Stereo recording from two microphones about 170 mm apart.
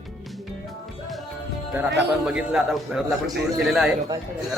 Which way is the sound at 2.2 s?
5° right (ahead or behind).